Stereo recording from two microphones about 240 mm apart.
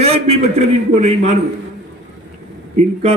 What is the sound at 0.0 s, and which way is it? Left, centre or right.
Speech, right.